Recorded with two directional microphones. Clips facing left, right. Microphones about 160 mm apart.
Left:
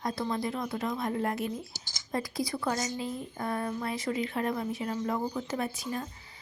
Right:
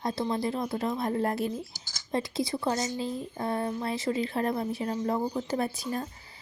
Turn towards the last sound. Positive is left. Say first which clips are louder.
# right 2 dB
turn(degrees=-35)  # may be behind; listen again after turning